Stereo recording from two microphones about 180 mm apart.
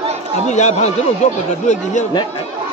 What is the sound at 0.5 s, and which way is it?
Speech, 40° left (ahead or behind).